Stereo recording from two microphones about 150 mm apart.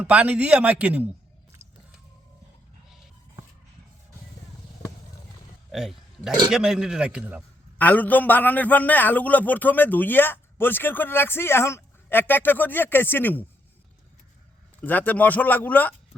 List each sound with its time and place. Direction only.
0.0 s a man's voice: 10° right (ahead or behind)
1.6 s biting: 45° right (ahead or behind)
5.7 s a man's voice: 5° right (ahead or behind)
7.8 s a man's voice: 10° left (ahead or behind)
14.8 s a man's voice: 10° left (ahead or behind)